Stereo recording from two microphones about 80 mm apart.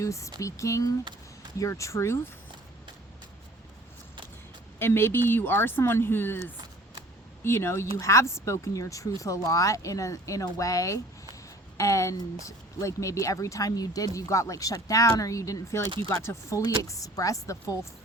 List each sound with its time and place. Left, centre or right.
0.0 s speech: left
4.8 s speech: left